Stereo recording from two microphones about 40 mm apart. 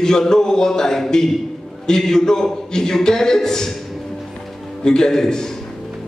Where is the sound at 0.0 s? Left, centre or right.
Centre.